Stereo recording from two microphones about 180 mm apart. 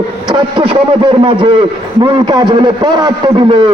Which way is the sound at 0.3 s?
25° right (ahead or behind).